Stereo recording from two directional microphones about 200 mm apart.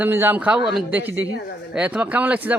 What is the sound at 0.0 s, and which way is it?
A child's voice, 10° right (ahead or behind).